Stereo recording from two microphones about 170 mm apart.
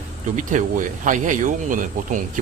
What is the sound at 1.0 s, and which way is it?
Speech, 50° right (ahead or behind).